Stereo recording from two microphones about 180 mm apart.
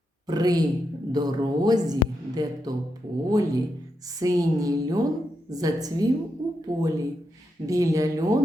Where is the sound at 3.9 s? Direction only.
20° right (ahead or behind).